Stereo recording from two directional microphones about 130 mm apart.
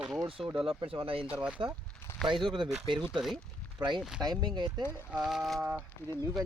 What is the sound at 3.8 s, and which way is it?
Speech, 35° right (ahead or behind).